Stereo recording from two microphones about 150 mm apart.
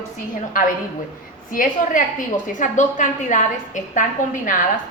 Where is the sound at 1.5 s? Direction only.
65° left (ahead or behind).